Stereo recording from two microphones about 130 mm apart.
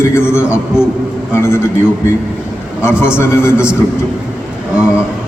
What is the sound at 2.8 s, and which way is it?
Speech, 20° left (ahead or behind).